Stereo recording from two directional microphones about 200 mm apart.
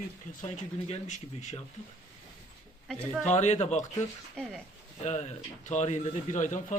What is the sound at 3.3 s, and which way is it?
Speech, 35° left (ahead or behind).